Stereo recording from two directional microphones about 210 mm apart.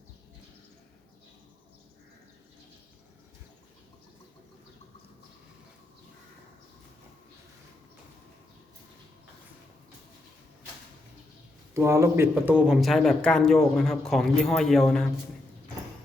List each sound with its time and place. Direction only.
11.7 s speech: 15° right (ahead or behind)